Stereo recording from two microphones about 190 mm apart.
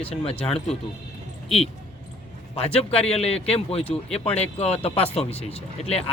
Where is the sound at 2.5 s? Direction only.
30° left (ahead or behind).